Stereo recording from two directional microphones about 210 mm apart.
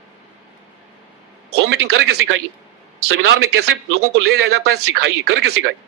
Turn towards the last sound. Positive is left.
turn(degrees=-50)  # may be behind; listen again after turning